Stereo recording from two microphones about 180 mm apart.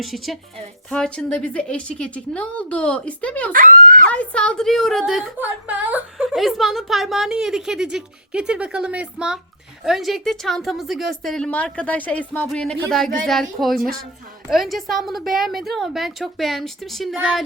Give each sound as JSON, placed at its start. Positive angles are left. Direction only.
{"t": 0.0, "sound": "a woman's voice", "side_deg": 0}
{"t": 3.5, "sound": "speech", "side_deg": -45}
{"t": 4.1, "sound": "a woman's voice", "side_deg": 5}